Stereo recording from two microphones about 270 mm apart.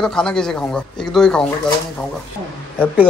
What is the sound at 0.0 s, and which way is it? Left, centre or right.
A man's voice, centre.